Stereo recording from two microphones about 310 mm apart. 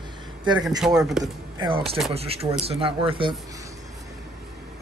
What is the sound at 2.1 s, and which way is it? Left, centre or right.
Speech, centre.